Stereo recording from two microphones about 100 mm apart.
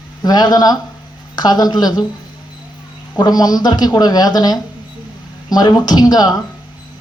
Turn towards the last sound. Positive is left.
turn(degrees=40)  # may be behind; listen again after turning